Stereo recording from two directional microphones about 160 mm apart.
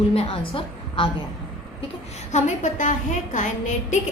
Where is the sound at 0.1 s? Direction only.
35° left (ahead or behind).